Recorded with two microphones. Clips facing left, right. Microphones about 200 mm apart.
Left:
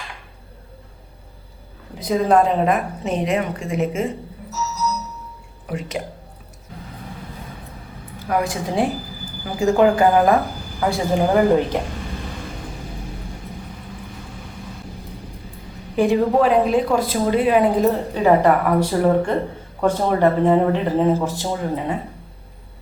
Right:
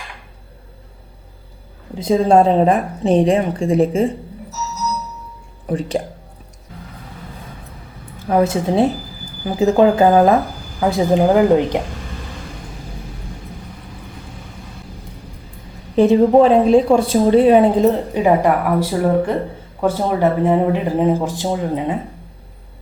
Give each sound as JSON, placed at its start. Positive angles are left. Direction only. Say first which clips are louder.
{"t": 2.0, "sound": "a woman's voice", "louder": "right 4 dB", "side_deg": -25}
{"t": 5.6, "sound": "a woman's voice", "louder": "right 7 dB", "side_deg": -30}
{"t": 8.3, "sound": "a woman's voice", "louder": "right 6 dB", "side_deg": -25}
{"t": 16.0, "sound": "a woman's voice", "louder": "right 6 dB", "side_deg": -25}
{"t": 18.1, "sound": "speech", "louder": "right 1 dB", "side_deg": -15}